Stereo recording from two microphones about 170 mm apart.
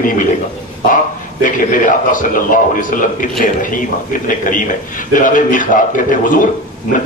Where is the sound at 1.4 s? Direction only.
50° left (ahead or behind).